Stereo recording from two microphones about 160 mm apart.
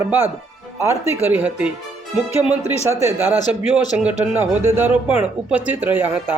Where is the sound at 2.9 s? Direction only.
15° right (ahead or behind).